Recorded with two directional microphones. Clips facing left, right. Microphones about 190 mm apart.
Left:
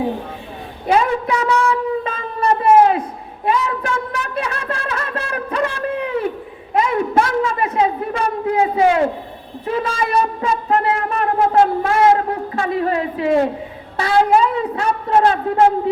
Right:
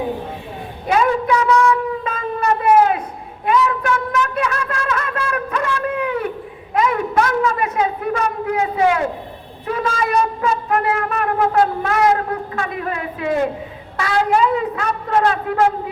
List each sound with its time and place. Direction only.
0.9 s a sound: 30° left (ahead or behind)
9.6 s shofar: 30° left (ahead or behind)
14.0 s a woman's voice: 35° left (ahead or behind)